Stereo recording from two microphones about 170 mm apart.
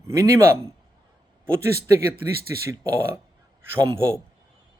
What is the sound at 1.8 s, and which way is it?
Speech, 65° right (ahead or behind).